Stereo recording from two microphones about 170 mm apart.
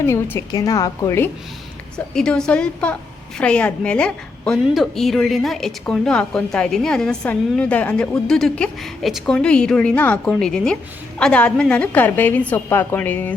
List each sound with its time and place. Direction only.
0.0 s a woman's voice: 15° left (ahead or behind)
2.1 s a woman's voice: 5° left (ahead or behind)